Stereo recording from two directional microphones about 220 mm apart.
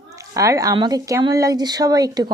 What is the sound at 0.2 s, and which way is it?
Speech, 15° right (ahead or behind).